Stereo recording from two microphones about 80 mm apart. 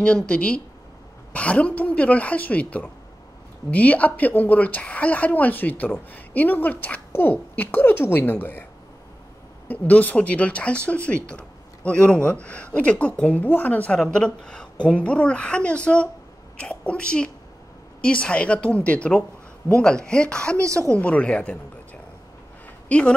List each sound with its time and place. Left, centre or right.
0.0 s a woman's voice: centre
9.7 s speech: centre
20.5 s speech: right
20.9 s speech: centre
22.8 s speech: centre